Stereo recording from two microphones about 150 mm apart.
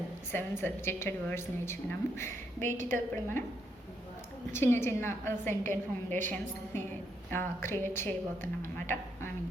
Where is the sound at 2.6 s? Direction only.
60° right (ahead or behind).